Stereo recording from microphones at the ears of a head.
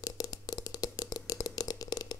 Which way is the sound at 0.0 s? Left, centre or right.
Left.